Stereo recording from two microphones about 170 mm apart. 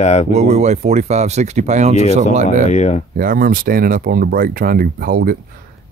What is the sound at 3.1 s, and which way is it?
Speech, 60° right (ahead or behind).